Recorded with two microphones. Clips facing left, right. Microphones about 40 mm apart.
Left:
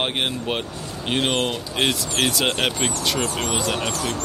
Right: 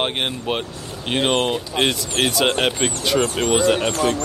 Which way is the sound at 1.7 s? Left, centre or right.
Centre.